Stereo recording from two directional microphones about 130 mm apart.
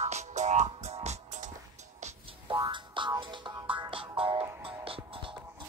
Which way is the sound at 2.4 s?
35° right (ahead or behind).